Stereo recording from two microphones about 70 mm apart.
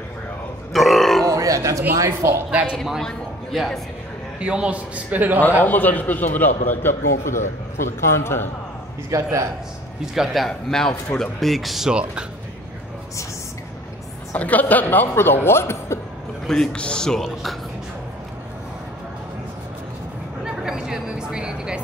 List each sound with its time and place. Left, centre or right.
0.7 s grunt: centre
1.2 s a sound: right
2.0 s speech: right
2.5 s speech: centre
2.8 s speech: centre
4.4 s a man's voice: centre
5.6 s speech: left
7.8 s a man's voice: left
9.1 s speech: right
10.1 s speech: centre
11.9 s speech: centre
14.3 s speech: left
16.4 s speech: centre
20.4 s a sound: centre